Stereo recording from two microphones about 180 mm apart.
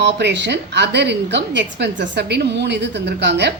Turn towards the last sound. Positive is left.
turn(degrees=-70)  # may be behind; listen again after turning